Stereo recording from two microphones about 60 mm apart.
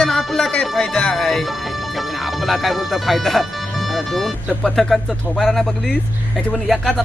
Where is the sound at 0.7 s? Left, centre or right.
Centre.